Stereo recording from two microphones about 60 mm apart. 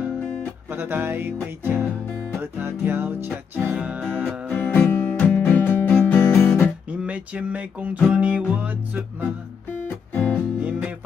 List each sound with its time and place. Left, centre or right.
0.7 s music: right
3.3 s music: right
4.6 s music: left
6.1 s guitar: left
6.9 s speech: right
8.1 s music: right
9.8 s music: left
10.6 s music: right